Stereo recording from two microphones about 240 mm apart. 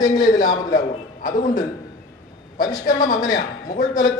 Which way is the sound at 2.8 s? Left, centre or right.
Left.